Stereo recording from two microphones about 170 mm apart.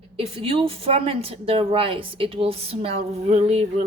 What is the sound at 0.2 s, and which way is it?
A woman's voice, 35° right (ahead or behind).